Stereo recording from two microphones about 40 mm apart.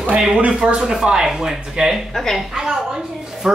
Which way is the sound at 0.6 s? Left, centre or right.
Centre.